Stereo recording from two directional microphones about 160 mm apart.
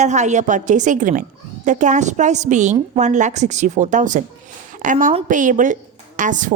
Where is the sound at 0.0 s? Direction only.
45° right (ahead or behind).